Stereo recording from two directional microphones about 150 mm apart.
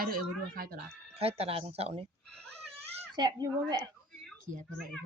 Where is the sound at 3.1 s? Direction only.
30° right (ahead or behind).